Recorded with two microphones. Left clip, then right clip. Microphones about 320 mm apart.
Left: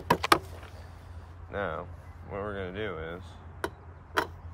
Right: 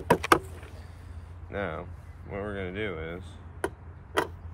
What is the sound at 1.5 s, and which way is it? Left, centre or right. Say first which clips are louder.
Speech: even; centre.